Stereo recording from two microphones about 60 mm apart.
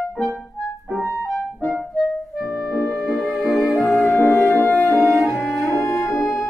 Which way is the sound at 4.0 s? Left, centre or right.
Left.